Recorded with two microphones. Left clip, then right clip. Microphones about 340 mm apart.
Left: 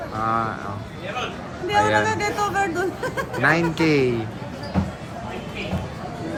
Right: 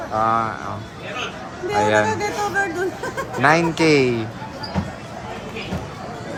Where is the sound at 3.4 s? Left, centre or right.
Centre.